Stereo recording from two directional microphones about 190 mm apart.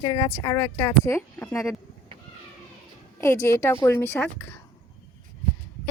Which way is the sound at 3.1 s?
15° left (ahead or behind).